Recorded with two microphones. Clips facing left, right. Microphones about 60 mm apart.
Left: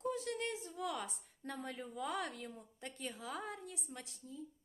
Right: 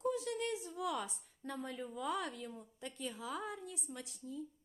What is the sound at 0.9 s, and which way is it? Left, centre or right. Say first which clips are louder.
A woman's voice: right 3 dB; left.